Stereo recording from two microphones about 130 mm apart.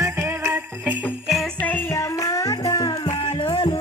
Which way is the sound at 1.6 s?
15° left (ahead or behind).